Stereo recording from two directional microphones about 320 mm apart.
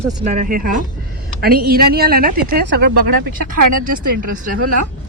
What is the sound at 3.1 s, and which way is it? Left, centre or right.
Speech, right.